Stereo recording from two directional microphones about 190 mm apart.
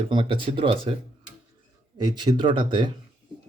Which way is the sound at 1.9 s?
25° right (ahead or behind).